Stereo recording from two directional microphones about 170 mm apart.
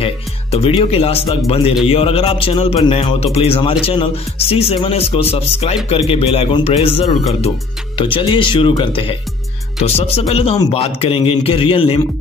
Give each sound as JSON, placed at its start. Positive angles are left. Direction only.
{"t": 0.0, "sound": "a man's voice", "side_deg": 35}